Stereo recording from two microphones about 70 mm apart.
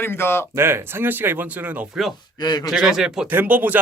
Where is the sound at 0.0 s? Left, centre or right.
Left.